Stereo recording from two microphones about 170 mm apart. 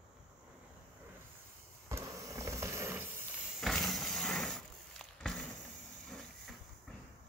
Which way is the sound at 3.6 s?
Centre (ahead or behind).